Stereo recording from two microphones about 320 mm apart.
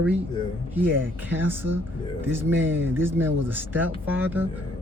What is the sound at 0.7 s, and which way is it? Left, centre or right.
A man's voice, centre.